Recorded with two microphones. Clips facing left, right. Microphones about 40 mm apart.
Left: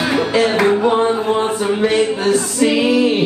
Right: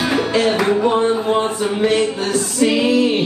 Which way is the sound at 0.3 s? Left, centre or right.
Centre.